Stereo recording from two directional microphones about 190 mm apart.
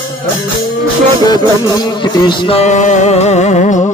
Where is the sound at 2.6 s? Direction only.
40° left (ahead or behind).